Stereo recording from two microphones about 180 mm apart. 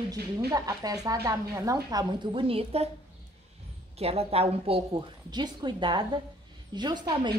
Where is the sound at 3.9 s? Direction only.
35° right (ahead or behind).